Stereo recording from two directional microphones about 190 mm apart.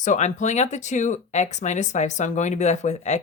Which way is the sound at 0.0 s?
40° left (ahead or behind).